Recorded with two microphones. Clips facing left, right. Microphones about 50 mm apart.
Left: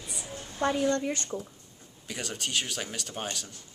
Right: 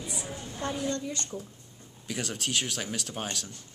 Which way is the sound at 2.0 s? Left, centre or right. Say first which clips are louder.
Right 2 dB; centre.